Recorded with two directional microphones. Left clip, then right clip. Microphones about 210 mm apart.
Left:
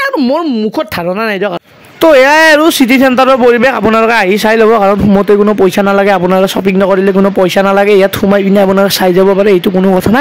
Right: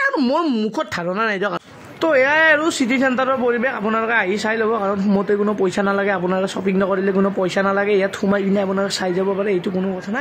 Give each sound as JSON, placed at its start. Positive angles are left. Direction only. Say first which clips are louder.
{"t": 2.0, "sound": "a man's voice", "louder": "left 10 dB", "side_deg": 50}